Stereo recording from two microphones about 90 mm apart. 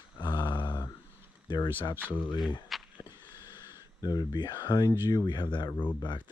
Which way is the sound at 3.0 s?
50° left (ahead or behind).